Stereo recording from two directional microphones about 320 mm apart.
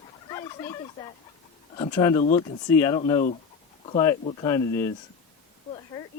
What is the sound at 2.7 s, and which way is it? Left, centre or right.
Speech, centre.